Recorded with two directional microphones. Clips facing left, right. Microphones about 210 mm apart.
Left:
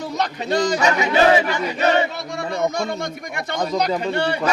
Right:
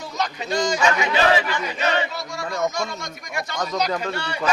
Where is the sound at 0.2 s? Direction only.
60° left (ahead or behind).